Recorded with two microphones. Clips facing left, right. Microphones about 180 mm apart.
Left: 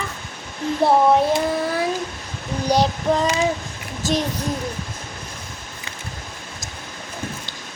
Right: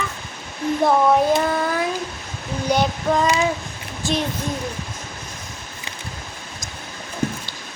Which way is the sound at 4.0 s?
40° left (ahead or behind).